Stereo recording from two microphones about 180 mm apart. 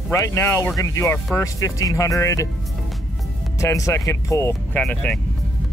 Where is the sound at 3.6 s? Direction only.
15° left (ahead or behind).